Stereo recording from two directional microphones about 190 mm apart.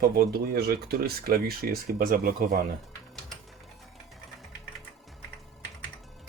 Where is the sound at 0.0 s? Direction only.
55° right (ahead or behind).